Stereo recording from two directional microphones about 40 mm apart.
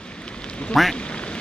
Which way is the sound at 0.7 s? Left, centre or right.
Centre.